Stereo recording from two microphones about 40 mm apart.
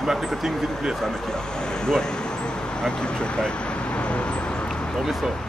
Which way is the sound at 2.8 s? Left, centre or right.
Centre.